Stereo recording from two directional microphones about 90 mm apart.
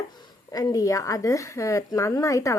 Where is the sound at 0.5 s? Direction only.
40° left (ahead or behind).